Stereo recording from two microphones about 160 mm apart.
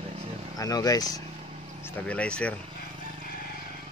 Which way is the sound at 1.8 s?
10° left (ahead or behind).